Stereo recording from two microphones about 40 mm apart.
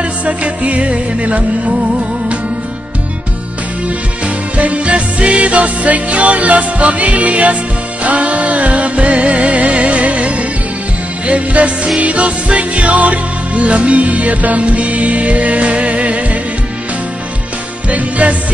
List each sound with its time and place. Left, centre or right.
0.0 s music: right
4.6 s music: right
17.8 s music: right